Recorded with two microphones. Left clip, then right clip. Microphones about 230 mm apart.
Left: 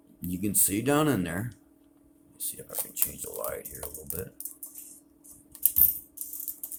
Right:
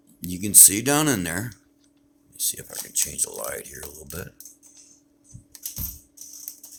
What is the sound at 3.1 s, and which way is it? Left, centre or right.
Speech, right.